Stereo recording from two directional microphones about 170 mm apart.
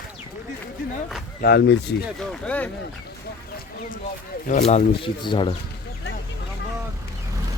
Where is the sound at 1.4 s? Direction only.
85° left.